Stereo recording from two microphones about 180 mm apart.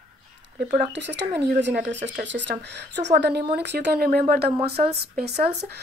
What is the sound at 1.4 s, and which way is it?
A woman's voice, 70° right (ahead or behind).